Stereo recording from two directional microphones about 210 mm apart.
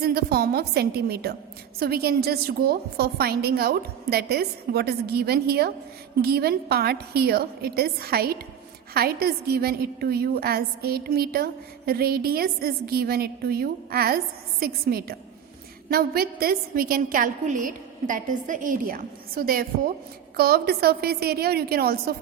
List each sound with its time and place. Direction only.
0.0 s a woman's voice: 50° right (ahead or behind)